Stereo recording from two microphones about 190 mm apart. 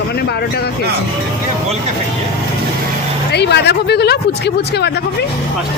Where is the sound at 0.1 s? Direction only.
55° left (ahead or behind).